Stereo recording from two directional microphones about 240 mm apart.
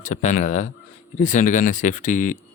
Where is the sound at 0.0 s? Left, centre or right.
Left.